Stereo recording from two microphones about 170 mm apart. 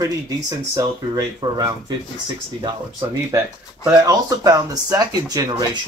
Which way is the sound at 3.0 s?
20° right (ahead or behind).